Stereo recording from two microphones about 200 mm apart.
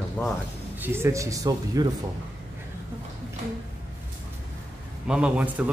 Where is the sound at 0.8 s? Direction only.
10° right (ahead or behind).